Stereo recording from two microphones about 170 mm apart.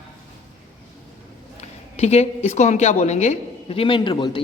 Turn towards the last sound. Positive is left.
turn(degrees=25)  # may be behind; listen again after turning